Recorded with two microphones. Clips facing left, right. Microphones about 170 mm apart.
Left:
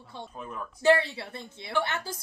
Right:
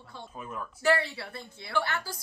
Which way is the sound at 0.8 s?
20° left (ahead or behind).